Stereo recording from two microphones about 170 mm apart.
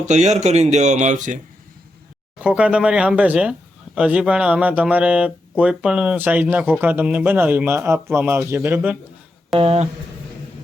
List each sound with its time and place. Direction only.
0.1 s speech: 45° right (ahead or behind)
2.4 s speech: 5° right (ahead or behind)
9.6 s speech: 35° right (ahead or behind)